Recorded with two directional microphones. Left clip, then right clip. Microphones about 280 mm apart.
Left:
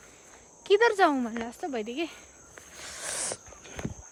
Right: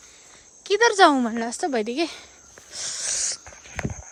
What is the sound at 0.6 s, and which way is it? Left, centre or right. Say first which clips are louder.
Speech: right 5 dB; centre.